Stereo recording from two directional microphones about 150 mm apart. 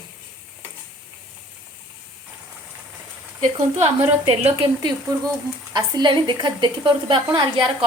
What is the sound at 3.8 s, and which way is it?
Speech, 45° right (ahead or behind).